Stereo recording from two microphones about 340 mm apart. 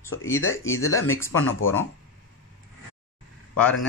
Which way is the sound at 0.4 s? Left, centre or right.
Left.